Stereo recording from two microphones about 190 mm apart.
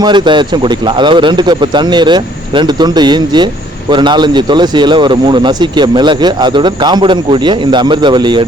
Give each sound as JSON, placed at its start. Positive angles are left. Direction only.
{"t": 0.0, "sound": "speech", "side_deg": -25}